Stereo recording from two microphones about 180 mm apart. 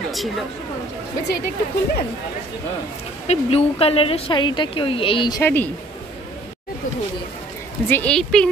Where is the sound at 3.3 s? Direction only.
35° left (ahead or behind).